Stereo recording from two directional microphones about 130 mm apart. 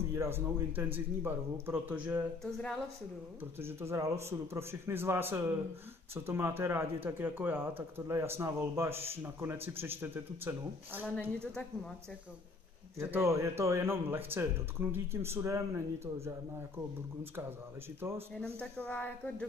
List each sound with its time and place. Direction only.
0.1 s a man's voice: 20° right (ahead or behind)
2.4 s a sound: 5° left (ahead or behind)
3.5 s a man's voice: 20° right (ahead or behind)
11.1 s speech: 5° left (ahead or behind)
13.0 s speech: 20° right (ahead or behind)
18.3 s speech: 5° left (ahead or behind)